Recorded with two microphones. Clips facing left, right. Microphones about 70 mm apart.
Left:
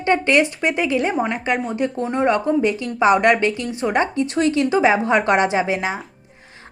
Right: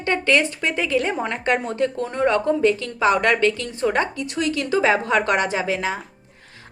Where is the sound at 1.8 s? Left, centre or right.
Centre.